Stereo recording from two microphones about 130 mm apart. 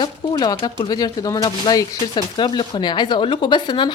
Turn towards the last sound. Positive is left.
turn(degrees=35)  # may be behind; listen again after turning